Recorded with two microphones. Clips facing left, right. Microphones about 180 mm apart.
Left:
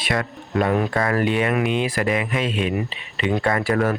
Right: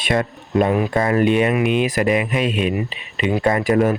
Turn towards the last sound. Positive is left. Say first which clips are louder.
# right 4 dB
turn(degrees=-15)  # may be behind; listen again after turning